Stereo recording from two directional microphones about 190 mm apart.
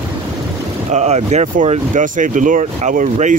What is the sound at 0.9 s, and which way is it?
Speech, 35° right (ahead or behind).